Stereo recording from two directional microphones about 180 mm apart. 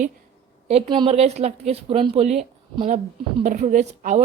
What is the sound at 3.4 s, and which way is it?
Speech, 45° right (ahead or behind).